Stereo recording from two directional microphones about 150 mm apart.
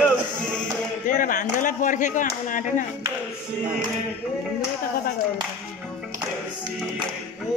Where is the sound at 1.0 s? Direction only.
65° left (ahead or behind).